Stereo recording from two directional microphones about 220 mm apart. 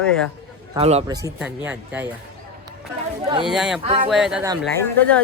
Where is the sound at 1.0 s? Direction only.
15° right (ahead or behind).